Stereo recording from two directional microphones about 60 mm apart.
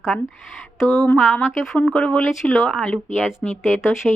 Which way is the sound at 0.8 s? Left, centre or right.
Centre.